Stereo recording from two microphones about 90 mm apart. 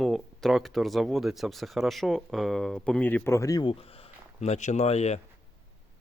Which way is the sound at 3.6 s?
90° left.